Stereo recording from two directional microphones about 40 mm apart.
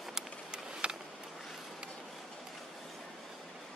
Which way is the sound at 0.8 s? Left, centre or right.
Right.